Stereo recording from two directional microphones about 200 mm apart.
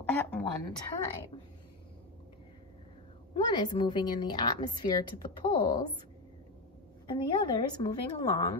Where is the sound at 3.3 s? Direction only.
20° left (ahead or behind).